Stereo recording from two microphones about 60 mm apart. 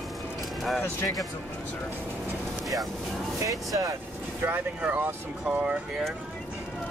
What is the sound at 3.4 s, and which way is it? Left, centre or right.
Speech, right.